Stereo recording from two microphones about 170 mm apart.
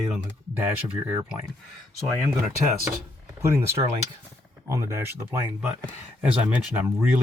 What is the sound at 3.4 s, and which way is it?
Speech, 15° right (ahead or behind).